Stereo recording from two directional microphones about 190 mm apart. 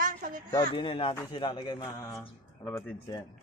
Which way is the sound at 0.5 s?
25° left (ahead or behind).